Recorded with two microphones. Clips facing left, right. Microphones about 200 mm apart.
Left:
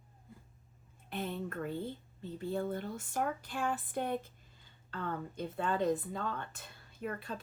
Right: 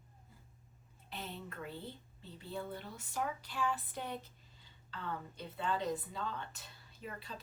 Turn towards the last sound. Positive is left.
turn(degrees=55)  # may be behind; listen again after turning